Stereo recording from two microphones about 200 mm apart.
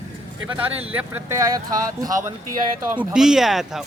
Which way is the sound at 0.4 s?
10° right (ahead or behind).